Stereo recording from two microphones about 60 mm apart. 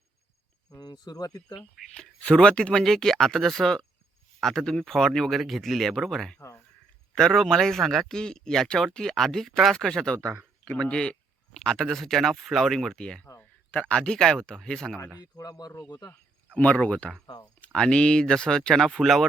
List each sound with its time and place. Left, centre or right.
0.7 s speech: left
2.2 s speech: centre
13.4 s speech: left
15.2 s speech: left
16.6 s speech: left; by 19.2 s centre